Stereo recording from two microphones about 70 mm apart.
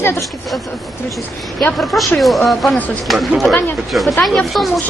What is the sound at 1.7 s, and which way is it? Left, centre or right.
A man's voice, centre.